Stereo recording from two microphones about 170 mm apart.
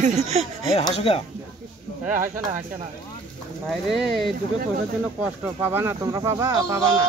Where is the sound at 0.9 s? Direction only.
35° left (ahead or behind).